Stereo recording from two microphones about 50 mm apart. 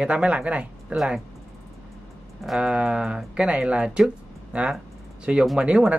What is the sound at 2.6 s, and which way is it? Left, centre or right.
Speech, centre.